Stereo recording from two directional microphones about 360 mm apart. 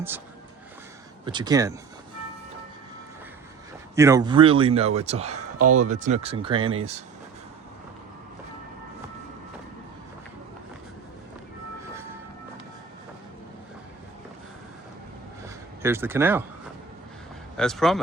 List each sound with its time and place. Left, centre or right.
1.2 s a man's voice: centre
3.9 s a man's voice: centre
15.8 s a man's voice: centre
17.6 s speech: centre